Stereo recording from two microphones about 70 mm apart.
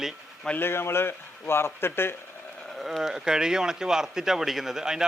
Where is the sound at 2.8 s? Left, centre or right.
Centre.